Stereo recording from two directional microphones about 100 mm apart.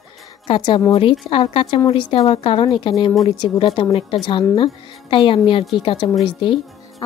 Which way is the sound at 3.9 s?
60° left (ahead or behind).